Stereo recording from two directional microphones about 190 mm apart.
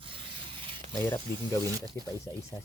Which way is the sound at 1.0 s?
10° left (ahead or behind).